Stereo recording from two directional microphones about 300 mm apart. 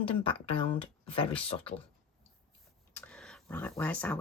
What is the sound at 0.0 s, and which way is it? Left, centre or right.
A woman's voice, centre.